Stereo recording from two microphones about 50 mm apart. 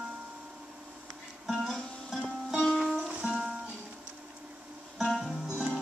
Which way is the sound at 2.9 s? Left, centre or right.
Centre.